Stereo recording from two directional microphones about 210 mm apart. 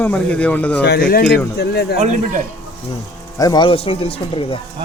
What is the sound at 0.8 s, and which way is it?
Speech, 50° left (ahead or behind).